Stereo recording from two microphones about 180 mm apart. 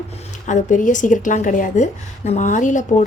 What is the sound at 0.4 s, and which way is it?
A woman's voice, 45° left (ahead or behind).